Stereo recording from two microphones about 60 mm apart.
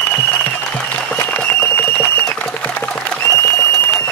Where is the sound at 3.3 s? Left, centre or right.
Left.